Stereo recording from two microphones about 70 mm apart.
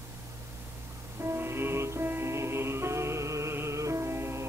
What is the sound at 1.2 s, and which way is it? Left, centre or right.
Music, right.